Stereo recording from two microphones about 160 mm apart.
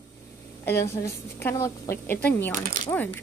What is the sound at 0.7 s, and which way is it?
Speech, 15° left (ahead or behind).